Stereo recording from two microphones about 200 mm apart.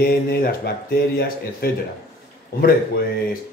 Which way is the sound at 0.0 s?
50° left (ahead or behind).